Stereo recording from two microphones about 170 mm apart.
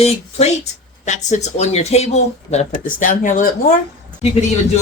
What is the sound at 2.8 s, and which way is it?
Speech, 50° left (ahead or behind).